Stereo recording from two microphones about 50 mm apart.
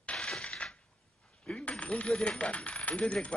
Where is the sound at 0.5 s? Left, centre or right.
Left.